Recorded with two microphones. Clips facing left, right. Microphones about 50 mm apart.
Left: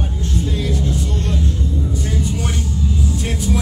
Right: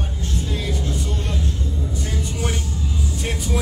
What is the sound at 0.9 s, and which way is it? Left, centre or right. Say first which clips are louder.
Vehicle: left 4 dB; centre.